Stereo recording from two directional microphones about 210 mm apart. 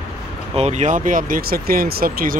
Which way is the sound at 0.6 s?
30° right (ahead or behind).